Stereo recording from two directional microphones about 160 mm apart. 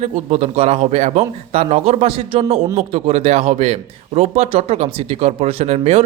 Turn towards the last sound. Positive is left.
turn(degrees=-40)  # may be behind; listen again after turning